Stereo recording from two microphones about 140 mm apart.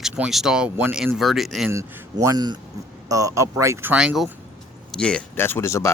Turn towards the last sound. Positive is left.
turn(degrees=20)  # may be behind; listen again after turning